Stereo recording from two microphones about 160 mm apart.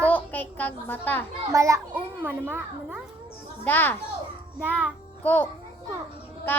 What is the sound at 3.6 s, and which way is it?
Speech, 10° left (ahead or behind).